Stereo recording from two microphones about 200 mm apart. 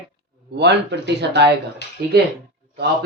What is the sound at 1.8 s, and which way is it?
Speech, 55° left (ahead or behind).